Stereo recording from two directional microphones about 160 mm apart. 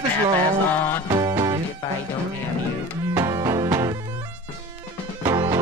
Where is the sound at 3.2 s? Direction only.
20° right (ahead or behind).